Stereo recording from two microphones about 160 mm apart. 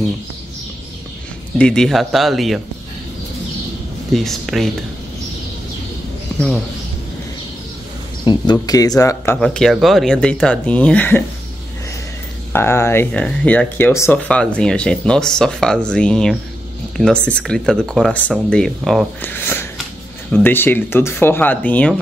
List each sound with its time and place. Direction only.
1.6 s speech: 5° left (ahead or behind)
4.1 s speech: centre (ahead or behind)
8.3 s speech: 25° left (ahead or behind)
9.4 s speech: centre (ahead or behind)
12.5 s speech: 15° left (ahead or behind)
19.2 s speech: 15° left (ahead or behind)